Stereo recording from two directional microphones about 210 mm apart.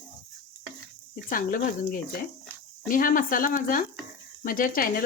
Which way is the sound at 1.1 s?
40° left (ahead or behind).